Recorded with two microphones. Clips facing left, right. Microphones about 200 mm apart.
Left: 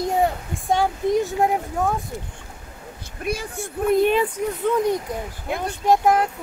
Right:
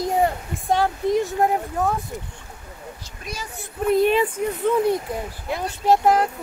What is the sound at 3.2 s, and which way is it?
Speech, 55° left (ahead or behind).